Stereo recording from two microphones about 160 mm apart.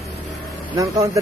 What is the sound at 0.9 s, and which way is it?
Speech, 20° right (ahead or behind).